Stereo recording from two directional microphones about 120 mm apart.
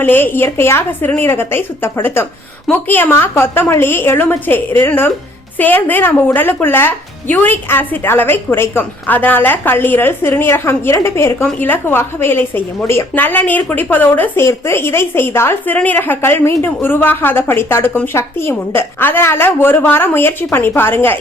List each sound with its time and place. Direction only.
0.0 s a woman's voice: 15° left (ahead or behind)